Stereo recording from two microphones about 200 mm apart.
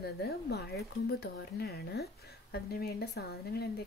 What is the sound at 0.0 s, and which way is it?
Speech, 55° left (ahead or behind).